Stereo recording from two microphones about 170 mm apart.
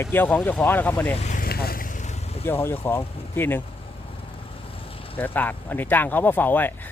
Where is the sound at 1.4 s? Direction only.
60° left (ahead or behind); by 2.4 s 40° left (ahead or behind).